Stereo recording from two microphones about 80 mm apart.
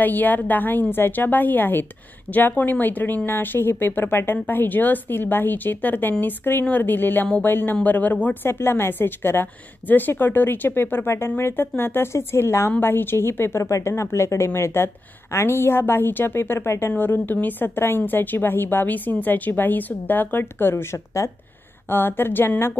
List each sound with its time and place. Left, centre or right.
0.0 s a woman's voice: left